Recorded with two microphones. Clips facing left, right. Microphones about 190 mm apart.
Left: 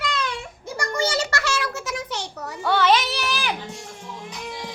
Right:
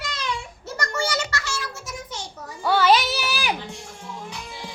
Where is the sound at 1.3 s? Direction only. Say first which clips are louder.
Left 5 dB; 70° left (ahead or behind).